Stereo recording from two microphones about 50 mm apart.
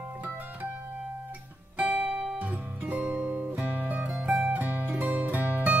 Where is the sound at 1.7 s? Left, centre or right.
Right.